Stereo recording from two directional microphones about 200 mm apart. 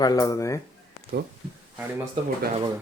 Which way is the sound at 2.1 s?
25° right (ahead or behind).